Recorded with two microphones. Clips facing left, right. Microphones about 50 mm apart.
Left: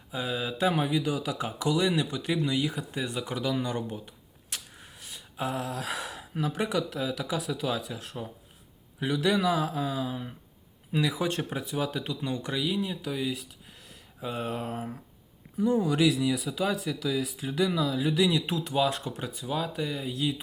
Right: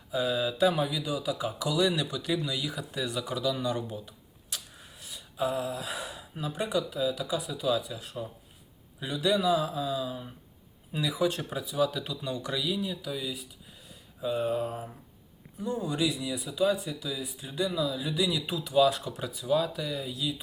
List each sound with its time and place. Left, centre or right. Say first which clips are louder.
0.1 s speech: right 3 dB; left
1.5 s speech: left 1 dB; left
15.6 s speech: left 6 dB; left
17.7 s speech: left 3 dB; left
19.8 s speech: left 3 dB; left